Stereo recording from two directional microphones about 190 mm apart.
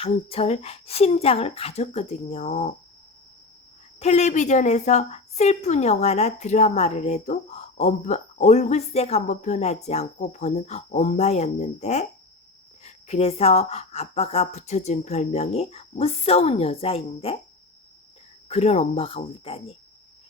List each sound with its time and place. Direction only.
0.0 s a woman's voice: 30° left (ahead or behind)
4.0 s a woman's voice: 35° left (ahead or behind)
18.4 s a woman's voice: 35° left (ahead or behind)